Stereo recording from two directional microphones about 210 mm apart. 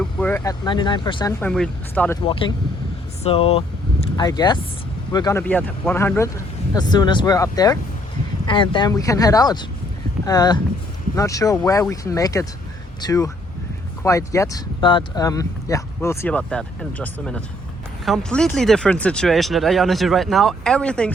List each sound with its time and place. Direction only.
0.0 s speech: 5° left (ahead or behind)
1.4 s speech: 5° left (ahead or behind)
2.2 s speech: 25° left (ahead or behind)
5.4 s speech: 5° left (ahead or behind)